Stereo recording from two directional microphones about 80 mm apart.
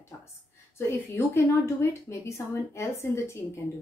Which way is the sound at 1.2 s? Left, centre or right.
Left.